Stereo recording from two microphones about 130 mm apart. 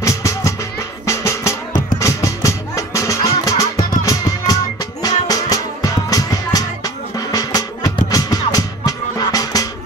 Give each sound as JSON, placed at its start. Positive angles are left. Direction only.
{"t": 0.0, "sound": "music", "side_deg": 20}